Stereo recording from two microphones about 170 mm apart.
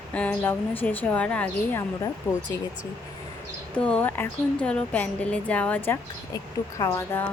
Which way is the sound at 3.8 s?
5° left (ahead or behind).